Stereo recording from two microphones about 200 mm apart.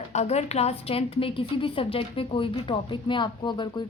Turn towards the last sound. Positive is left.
turn(degrees=20)  # may be behind; listen again after turning